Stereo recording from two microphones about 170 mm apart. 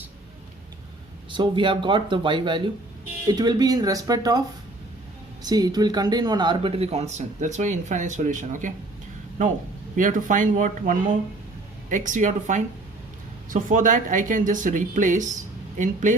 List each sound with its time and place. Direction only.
1.3 s speech: 30° right (ahead or behind); by 8.7 s 50° right (ahead or behind)
9.9 s speech: 50° right (ahead or behind)